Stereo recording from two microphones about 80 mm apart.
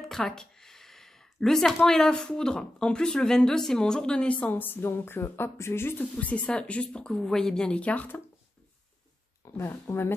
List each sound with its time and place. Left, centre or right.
0.1 s speech: centre; by 6.0 s left
6.1 s speech: centre
9.4 s a sound: left
9.8 s speech: left